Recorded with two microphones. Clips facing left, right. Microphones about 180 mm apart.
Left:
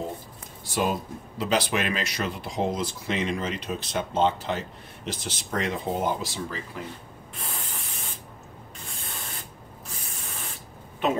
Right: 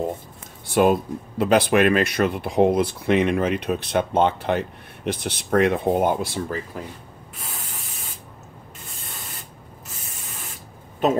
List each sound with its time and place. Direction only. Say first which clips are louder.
0.7 s speech: right 9 dB; 60° right (ahead or behind)
11.0 s a woman's voice: right 5 dB; 40° right (ahead or behind)